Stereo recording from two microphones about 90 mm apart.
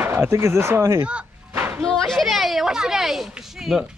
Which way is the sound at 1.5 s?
25° right (ahead or behind).